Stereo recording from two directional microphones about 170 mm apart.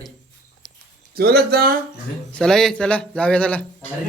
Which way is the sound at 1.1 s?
65° right (ahead or behind).